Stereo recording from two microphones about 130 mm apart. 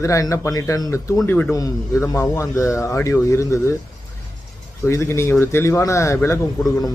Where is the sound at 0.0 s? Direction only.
25° left (ahead or behind).